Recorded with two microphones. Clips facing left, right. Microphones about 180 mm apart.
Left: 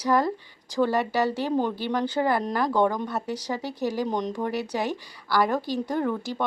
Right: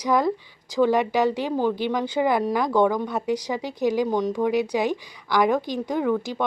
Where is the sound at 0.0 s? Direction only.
15° right (ahead or behind).